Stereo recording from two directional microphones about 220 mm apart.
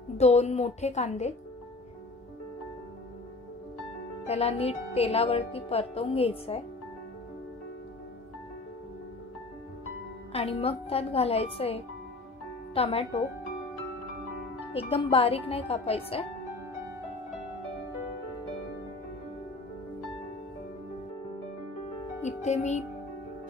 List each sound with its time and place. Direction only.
0.2 s speech: 30° left (ahead or behind)
4.3 s speech: 25° left (ahead or behind)
10.3 s speech: 25° left (ahead or behind)
14.7 s speech: 25° left (ahead or behind)
22.2 s speech: 30° left (ahead or behind)